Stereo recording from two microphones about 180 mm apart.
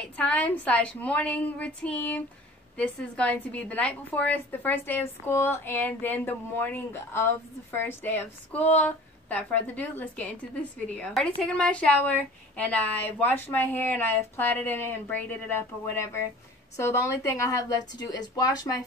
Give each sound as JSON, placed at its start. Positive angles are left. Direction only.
{"t": 0.0, "sound": "a woman's voice", "side_deg": 5}